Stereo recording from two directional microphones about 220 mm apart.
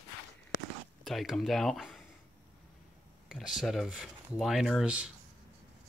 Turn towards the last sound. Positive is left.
turn(degrees=-5)  # may be behind; listen again after turning